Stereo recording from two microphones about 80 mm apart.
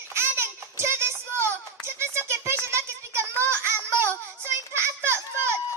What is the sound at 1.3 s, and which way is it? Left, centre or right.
Music, right.